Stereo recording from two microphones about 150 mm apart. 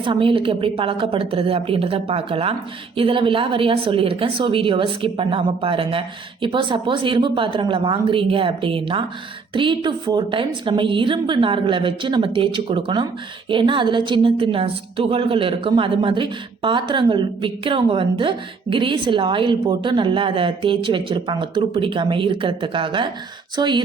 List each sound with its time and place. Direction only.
0.0 s a woman's voice: 35° right (ahead or behind)